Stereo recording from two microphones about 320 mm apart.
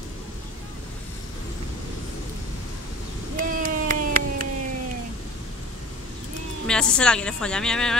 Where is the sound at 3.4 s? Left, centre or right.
Right.